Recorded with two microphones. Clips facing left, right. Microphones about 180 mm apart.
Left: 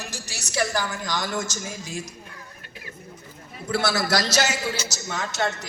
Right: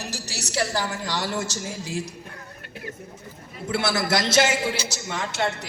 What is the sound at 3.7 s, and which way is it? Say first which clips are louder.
A man's voice: even; 25° right (ahead or behind).